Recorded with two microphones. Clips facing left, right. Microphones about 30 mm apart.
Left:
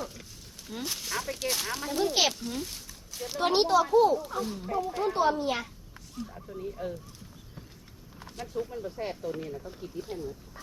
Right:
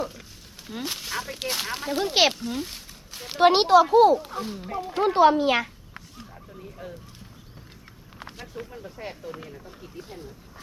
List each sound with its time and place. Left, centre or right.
0.0 s a sound: centre
0.8 s speech: right
2.5 s speech: right
3.5 s speech: right
4.2 s speech: right
4.9 s speech: right